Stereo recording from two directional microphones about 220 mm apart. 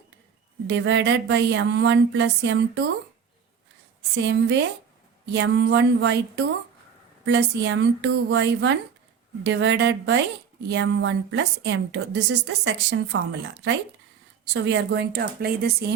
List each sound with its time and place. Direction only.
0.7 s a woman's voice: 55° right (ahead or behind)
4.1 s a woman's voice: 55° right (ahead or behind)
14.5 s a woman's voice: 55° right (ahead or behind)